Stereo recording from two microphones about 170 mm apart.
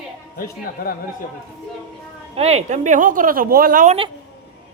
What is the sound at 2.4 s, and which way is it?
Speech, 40° right (ahead or behind).